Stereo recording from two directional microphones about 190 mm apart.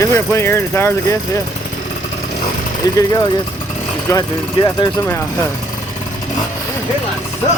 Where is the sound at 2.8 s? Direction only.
20° left (ahead or behind).